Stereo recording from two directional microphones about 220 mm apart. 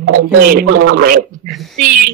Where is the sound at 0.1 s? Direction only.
40° right (ahead or behind).